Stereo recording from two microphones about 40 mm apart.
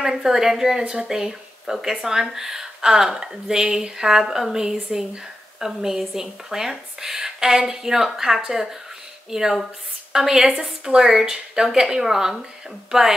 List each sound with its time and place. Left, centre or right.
0.0 s speech: centre